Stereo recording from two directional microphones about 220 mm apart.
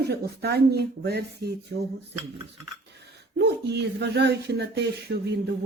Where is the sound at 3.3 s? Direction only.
50° right (ahead or behind).